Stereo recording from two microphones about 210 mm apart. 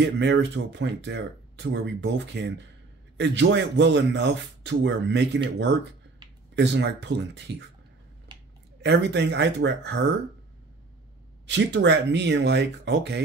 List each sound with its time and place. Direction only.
0.0 s speech: 55° right (ahead or behind)
6.5 s speech: 55° right (ahead or behind)
8.3 s a sound: 20° right (ahead or behind)
8.8 s speech: 55° right (ahead or behind)
11.4 s speech: 60° right (ahead or behind)